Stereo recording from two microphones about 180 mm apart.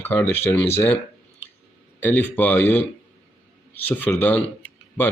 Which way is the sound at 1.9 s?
10° left (ahead or behind).